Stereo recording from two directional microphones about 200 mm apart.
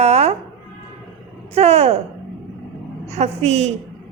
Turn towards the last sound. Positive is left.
turn(degrees=-30)  # may be behind; listen again after turning